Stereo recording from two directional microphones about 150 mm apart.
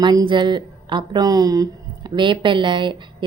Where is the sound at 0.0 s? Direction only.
30° right (ahead or behind).